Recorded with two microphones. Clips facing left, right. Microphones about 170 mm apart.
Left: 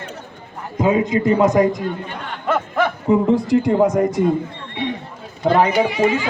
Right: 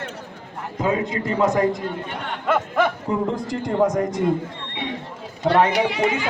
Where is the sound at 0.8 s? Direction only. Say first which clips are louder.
Left 6 dB; 15° left (ahead or behind).